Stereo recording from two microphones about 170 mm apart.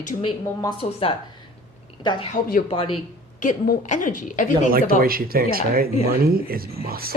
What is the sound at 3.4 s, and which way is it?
A woman's voice, 50° left (ahead or behind).